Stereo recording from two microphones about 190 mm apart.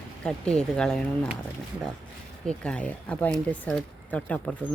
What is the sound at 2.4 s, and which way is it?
Speech, 5° left (ahead or behind).